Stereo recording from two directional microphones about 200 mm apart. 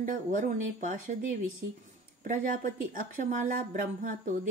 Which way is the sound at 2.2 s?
45° right (ahead or behind).